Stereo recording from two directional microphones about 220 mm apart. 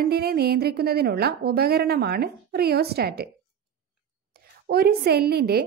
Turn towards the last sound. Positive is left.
turn(degrees=-45)  # may be behind; listen again after turning